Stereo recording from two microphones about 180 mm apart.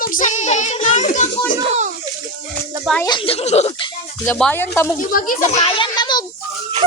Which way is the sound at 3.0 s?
30° left (ahead or behind).